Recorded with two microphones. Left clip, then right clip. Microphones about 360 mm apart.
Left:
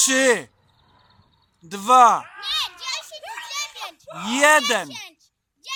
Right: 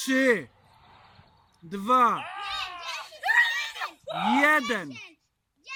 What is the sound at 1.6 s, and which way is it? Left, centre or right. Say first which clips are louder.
Speech: left 8 dB; centre.